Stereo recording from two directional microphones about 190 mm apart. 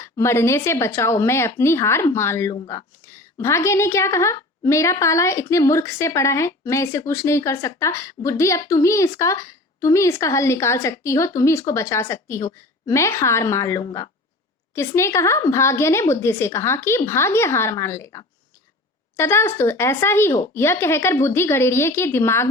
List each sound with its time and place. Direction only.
0.0 s speech: 15° left (ahead or behind)